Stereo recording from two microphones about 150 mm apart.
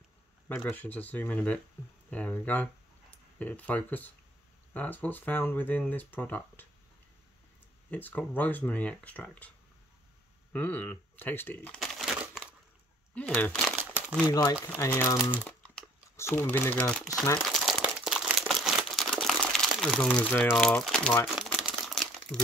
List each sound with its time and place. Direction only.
0.5 s speech: 15° left (ahead or behind)
7.9 s speech: 10° left (ahead or behind)
10.5 s speech: 10° left (ahead or behind)
11.8 s crumpling: centre (ahead or behind)
13.1 s speech: 10° left (ahead or behind)
14.2 s speech: 25° left (ahead or behind)
16.9 s speech: centre (ahead or behind)
17.4 s crumpling: centre (ahead or behind)
21.6 s crumpling: centre (ahead or behind)